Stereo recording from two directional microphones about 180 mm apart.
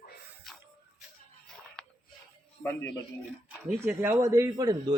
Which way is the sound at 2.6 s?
10° left (ahead or behind).